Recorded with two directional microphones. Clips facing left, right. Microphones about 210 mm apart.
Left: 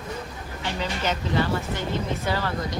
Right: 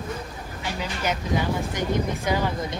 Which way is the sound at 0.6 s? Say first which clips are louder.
Left 1 dB; 10° right (ahead or behind).